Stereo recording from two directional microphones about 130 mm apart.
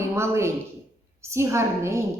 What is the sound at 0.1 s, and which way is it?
A woman's voice, 20° right (ahead or behind).